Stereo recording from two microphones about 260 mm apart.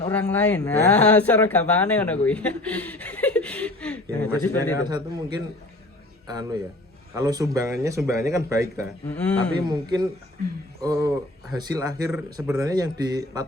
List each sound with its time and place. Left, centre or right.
0.0 s speech: centre
4.9 s a man's voice: centre
9.0 s speech: centre
9.6 s a man's voice: centre